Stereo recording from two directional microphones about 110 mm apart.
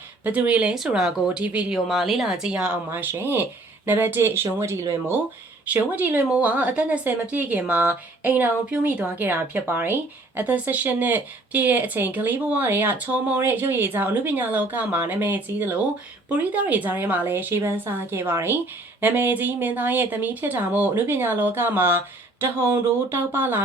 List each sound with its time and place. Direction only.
0.3 s speech: 10° right (ahead or behind)
5.7 s speech: 15° right (ahead or behind)